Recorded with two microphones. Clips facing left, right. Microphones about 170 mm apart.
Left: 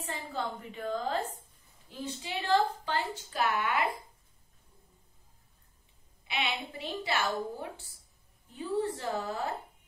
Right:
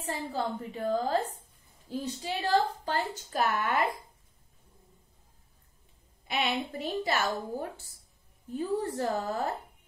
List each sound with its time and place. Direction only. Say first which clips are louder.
0.0 s a woman's voice: right 4 dB; 40° right (ahead or behind)
6.2 s a woman's voice: right 4 dB; 45° right (ahead or behind)
8.5 s a woman's voice: right 2 dB; 45° right (ahead or behind)